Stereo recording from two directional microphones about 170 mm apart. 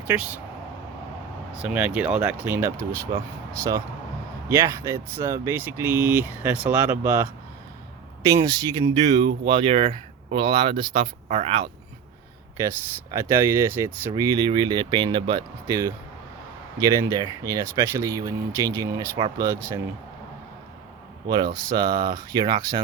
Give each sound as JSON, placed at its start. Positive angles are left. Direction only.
{"t": 0.1, "sound": "speech", "side_deg": -10}
{"t": 1.5, "sound": "speech", "side_deg": -5}
{"t": 8.3, "sound": "speech", "side_deg": -20}
{"t": 9.5, "sound": "speech", "side_deg": -30}
{"t": 12.5, "sound": "speech", "side_deg": -20}
{"t": 21.2, "sound": "speech", "side_deg": -25}